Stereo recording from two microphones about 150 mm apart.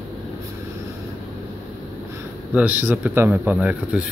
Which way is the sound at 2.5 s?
10° right (ahead or behind).